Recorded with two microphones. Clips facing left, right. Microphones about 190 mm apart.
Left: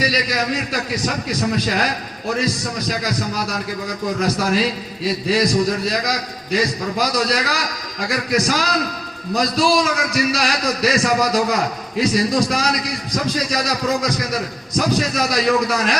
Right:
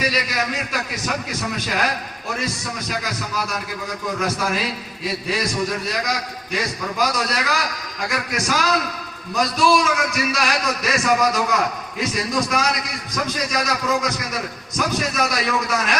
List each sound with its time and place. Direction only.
0.0 s a man's voice: 35° left (ahead or behind)